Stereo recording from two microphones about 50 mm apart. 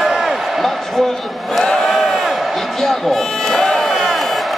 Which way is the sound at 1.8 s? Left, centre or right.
Centre.